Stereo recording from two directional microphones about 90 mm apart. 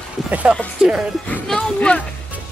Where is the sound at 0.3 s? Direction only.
15° right (ahead or behind).